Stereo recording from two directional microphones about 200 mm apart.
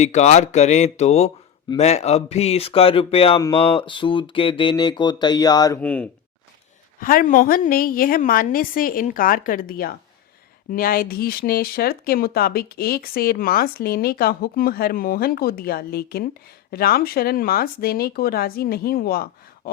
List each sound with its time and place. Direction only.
0.0 s speech: 35° left (ahead or behind); by 5.8 s 20° left (ahead or behind)
5.8 s speech: 5° left (ahead or behind)
7.0 s speech: 45° left (ahead or behind)